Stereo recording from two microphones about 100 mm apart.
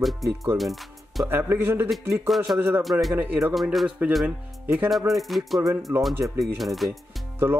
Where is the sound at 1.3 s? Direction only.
20° right (ahead or behind).